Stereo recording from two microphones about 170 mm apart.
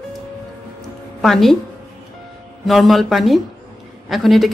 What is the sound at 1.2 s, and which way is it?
Speech, centre (ahead or behind).